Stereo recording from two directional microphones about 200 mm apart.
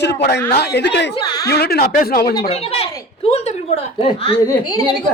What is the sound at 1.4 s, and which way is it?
Speech, 50° left (ahead or behind).